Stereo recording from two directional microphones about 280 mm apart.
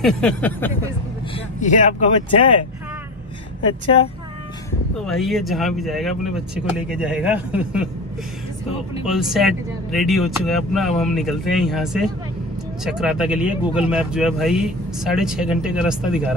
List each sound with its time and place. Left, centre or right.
0.0 s speech: centre
1.6 s speech: left
3.8 s speech: centre
4.9 s speech: centre
9.0 s speech: centre